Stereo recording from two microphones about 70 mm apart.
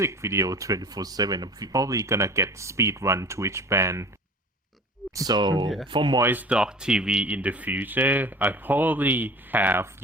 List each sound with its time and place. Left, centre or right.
0.0 s speech: right
5.1 s speech: right
6.5 s speech: centre